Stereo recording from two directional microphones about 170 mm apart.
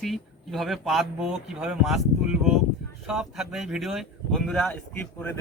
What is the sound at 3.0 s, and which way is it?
Speech, 5° right (ahead or behind).